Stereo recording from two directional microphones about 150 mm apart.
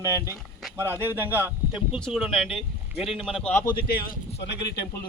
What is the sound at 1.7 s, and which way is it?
Speech, 5° right (ahead or behind).